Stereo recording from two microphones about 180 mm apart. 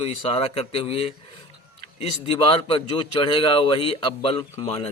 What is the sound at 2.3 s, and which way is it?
A man's voice, 30° left (ahead or behind).